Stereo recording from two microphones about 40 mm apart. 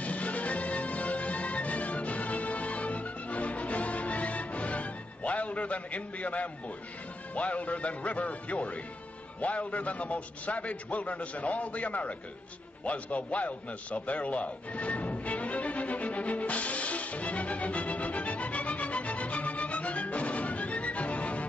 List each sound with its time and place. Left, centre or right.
0.0 s music: left
7.3 s a man's voice: left
12.8 s a sound: left